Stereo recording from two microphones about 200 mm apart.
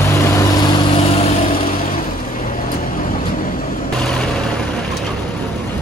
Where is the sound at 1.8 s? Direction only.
45° left (ahead or behind).